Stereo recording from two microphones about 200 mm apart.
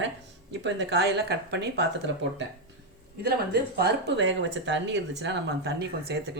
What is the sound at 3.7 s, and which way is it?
Speech, 55° right (ahead or behind).